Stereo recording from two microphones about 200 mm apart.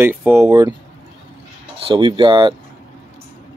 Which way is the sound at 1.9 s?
25° right (ahead or behind).